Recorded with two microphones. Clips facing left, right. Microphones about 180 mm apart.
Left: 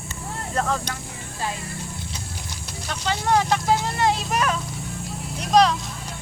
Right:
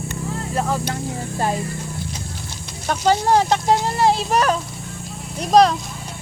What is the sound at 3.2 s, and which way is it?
Speech, 30° right (ahead or behind).